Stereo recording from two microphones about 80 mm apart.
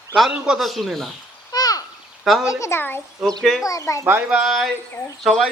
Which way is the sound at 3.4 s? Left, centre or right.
Centre.